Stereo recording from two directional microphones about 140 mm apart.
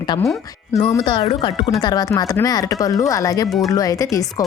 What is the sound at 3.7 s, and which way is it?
Speech, 25° left (ahead or behind).